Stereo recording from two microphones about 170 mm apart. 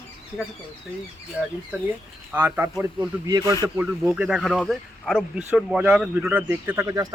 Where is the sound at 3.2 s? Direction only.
20° right (ahead or behind).